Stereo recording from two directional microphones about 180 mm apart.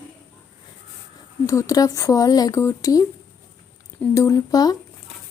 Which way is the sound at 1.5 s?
20° left (ahead or behind).